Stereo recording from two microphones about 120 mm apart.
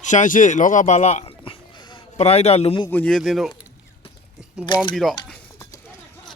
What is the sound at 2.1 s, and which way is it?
Speech, 65° left (ahead or behind).